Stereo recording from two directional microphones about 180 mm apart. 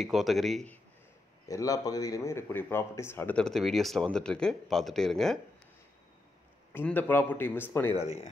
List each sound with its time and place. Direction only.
0.0 s speech: centre (ahead or behind)
1.5 s speech: 20° left (ahead or behind); by 5.4 s centre (ahead or behind)
6.7 s speech: 10° left (ahead or behind)
7.9 s speech: 35° left (ahead or behind)